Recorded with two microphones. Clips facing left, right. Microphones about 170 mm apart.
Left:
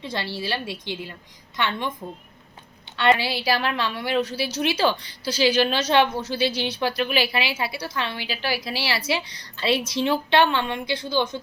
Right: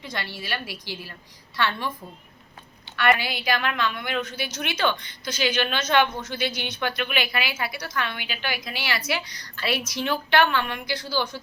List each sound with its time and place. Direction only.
0.0 s a woman's voice: 30° left (ahead or behind)
2.9 s a woman's voice: 25° left (ahead or behind)